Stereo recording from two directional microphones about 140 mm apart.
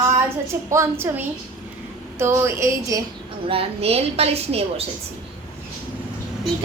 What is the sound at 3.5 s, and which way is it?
A woman's voice, 45° right (ahead or behind).